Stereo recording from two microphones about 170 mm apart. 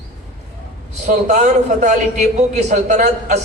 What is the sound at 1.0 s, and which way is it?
Speech, 45° right (ahead or behind).